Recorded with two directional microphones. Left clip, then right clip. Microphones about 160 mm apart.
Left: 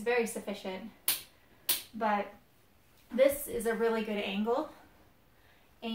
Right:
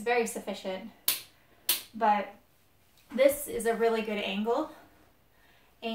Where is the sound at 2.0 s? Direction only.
15° right (ahead or behind).